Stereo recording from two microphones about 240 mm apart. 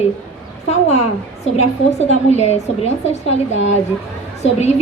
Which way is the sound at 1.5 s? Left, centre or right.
Left.